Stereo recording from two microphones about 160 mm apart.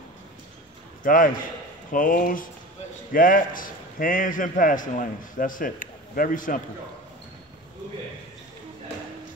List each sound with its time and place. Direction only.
1.0 s a man's voice: 60° left (ahead or behind)